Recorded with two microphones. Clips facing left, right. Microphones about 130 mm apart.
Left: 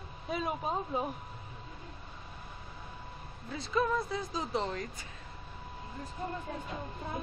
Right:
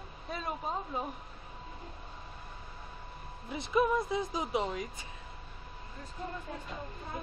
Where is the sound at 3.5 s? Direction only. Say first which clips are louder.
Right 2 dB; 15° right (ahead or behind).